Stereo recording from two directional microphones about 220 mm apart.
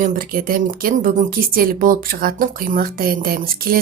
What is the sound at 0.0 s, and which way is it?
A woman's voice, 40° right (ahead or behind).